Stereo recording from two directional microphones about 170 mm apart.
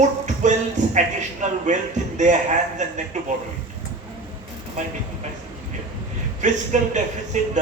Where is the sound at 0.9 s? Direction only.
45° right (ahead or behind).